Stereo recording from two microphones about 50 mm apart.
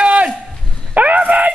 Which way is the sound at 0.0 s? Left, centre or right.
Right.